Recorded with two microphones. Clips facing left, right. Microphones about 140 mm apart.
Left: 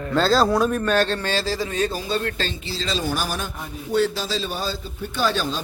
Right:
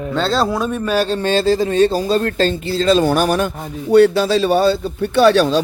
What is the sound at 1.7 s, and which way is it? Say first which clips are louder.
A man's voice: right 10 dB; 35° right (ahead or behind).